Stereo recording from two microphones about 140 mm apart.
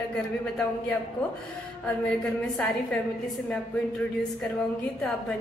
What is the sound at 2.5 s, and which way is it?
Speech, 5° left (ahead or behind).